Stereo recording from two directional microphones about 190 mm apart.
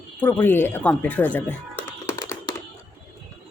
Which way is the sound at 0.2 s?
10° left (ahead or behind).